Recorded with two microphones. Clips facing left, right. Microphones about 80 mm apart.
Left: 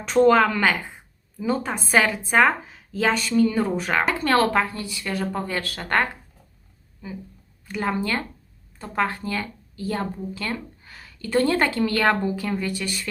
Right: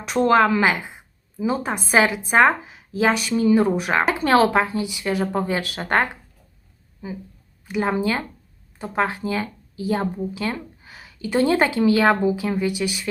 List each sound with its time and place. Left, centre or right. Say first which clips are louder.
0.0 s a woman's voice: even; centre
7.7 s speech: right 3 dB; centre